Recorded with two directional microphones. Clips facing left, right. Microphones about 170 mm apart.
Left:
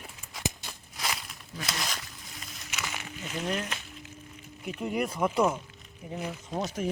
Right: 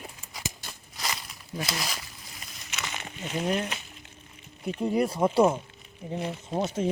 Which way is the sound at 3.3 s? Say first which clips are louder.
Right 4 dB; 30° right (ahead or behind).